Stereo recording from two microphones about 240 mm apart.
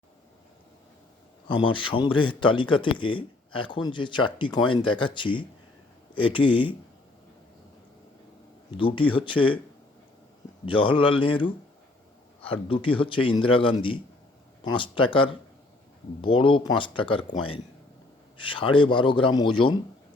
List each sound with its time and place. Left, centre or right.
1.5 s a man's voice: left
8.8 s a man's voice: left
10.7 s a man's voice: left